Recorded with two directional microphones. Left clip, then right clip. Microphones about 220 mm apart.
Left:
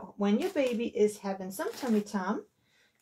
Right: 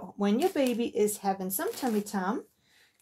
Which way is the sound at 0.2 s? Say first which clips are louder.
Right 2 dB; 40° right (ahead or behind).